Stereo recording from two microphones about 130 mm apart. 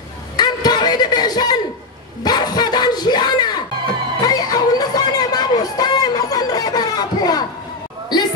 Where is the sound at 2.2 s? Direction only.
30° left (ahead or behind).